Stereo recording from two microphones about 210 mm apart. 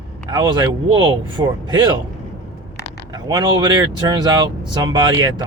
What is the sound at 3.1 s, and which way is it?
Speech, 20° right (ahead or behind).